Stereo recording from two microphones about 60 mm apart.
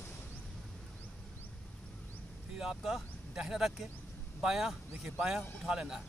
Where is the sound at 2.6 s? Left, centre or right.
Centre.